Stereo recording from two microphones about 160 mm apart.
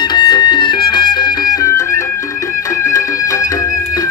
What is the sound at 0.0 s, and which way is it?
Music, 30° left (ahead or behind).